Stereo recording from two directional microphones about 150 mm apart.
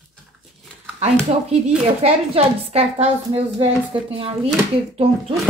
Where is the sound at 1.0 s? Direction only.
45° right (ahead or behind).